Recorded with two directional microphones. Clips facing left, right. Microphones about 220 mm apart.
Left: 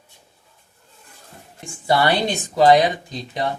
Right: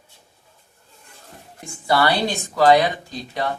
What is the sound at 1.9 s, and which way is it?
Speech, 20° left (ahead or behind).